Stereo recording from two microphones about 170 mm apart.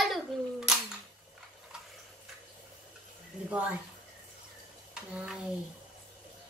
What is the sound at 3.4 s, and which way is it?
Speech, 10° right (ahead or behind).